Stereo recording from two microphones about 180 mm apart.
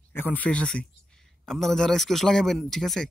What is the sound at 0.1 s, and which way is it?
A man's voice, 10° left (ahead or behind).